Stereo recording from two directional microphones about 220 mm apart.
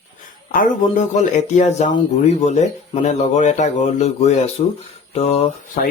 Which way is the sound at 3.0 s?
30° left (ahead or behind).